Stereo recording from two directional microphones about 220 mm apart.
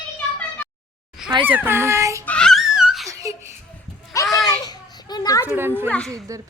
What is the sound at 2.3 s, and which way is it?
Laughter, 5° left (ahead or behind).